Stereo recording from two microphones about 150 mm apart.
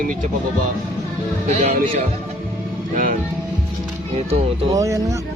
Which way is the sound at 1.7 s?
65° right (ahead or behind).